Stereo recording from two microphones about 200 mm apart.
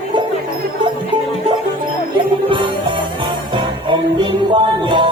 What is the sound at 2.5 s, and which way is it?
Music, 25° right (ahead or behind).